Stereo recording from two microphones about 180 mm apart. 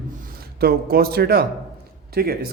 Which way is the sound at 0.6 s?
60° right (ahead or behind).